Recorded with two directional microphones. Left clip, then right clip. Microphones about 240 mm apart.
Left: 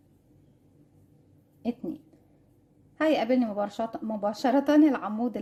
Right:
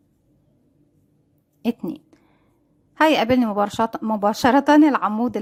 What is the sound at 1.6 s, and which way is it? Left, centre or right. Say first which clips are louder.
A woman's voice: right 7 dB; right.